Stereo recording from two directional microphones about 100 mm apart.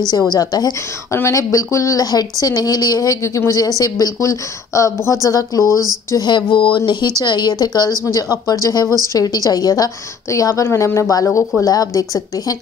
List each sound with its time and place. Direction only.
0.3 s speech: 40° left (ahead or behind)
6.1 s a sound: 45° left (ahead or behind)
6.9 s speech: 45° left (ahead or behind)